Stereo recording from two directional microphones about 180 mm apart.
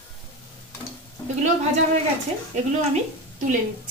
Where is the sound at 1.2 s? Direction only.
20° left (ahead or behind).